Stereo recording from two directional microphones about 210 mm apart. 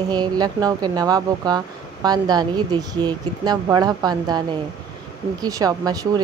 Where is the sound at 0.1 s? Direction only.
20° right (ahead or behind).